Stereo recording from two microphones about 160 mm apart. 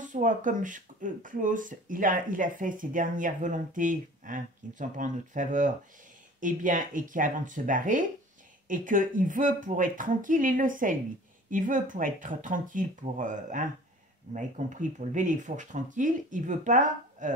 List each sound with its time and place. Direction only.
0.0 s speech: 55° right (ahead or behind)